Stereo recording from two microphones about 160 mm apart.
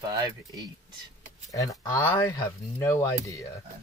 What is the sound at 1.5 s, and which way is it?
Speech, 20° left (ahead or behind).